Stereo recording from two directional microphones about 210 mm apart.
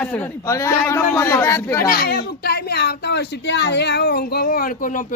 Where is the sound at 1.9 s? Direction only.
45° left (ahead or behind).